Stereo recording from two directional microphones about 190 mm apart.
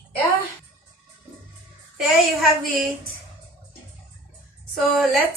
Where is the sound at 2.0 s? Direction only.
Centre (ahead or behind).